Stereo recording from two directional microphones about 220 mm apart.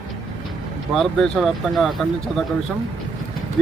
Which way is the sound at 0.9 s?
Centre (ahead or behind).